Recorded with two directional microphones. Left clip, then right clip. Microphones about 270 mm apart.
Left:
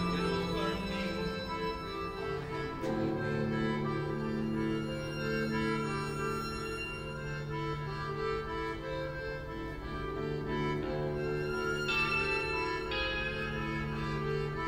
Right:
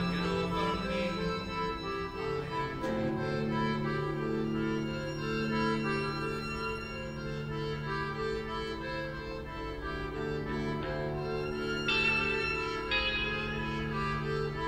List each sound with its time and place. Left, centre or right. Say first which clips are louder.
11.8 s music: right 4 dB; right